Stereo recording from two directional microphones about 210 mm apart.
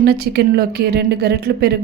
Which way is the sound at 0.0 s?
50° right (ahead or behind).